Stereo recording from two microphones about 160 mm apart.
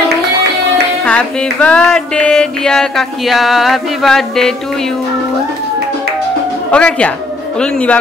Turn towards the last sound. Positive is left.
turn(degrees=5)  # may be behind; listen again after turning